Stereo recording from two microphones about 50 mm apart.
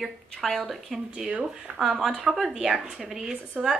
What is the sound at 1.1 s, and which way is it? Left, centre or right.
A woman's voice, centre.